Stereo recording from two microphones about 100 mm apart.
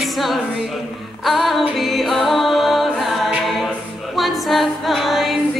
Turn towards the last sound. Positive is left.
turn(degrees=0)  # may be behind; listen again after turning